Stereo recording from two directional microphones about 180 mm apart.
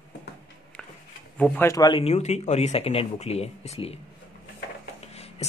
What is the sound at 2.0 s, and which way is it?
Speech, 40° left (ahead or behind).